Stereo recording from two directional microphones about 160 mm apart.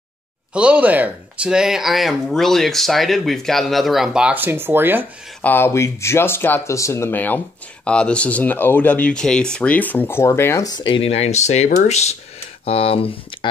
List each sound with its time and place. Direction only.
0.5 s speech: 5° right (ahead or behind)
5.4 s speech: 15° left (ahead or behind); by 13.5 s 35° left (ahead or behind)